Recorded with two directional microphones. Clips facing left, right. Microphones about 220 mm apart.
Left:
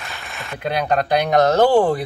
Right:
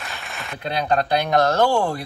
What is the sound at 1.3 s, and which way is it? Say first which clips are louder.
Speech: left 5 dB; 20° left (ahead or behind).